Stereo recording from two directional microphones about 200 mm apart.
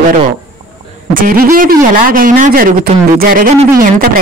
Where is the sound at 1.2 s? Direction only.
45° right (ahead or behind).